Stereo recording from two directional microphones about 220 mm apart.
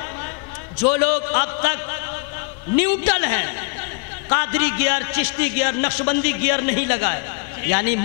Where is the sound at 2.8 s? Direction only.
15° left (ahead or behind).